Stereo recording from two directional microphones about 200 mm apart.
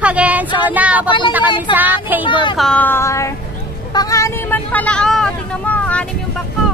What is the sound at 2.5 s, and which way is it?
Speech, 5° left (ahead or behind).